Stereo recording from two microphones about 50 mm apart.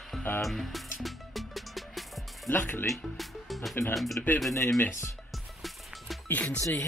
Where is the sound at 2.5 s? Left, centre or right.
Left.